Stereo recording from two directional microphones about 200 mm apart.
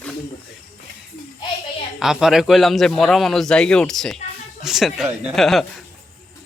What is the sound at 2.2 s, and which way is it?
A man's voice, centre (ahead or behind).